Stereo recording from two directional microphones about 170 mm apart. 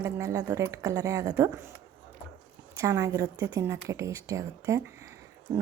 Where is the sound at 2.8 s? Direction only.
20° right (ahead or behind).